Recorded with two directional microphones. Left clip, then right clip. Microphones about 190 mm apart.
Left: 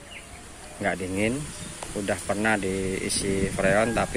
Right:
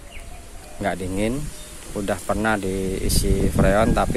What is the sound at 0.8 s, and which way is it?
Speech, 10° right (ahead or behind).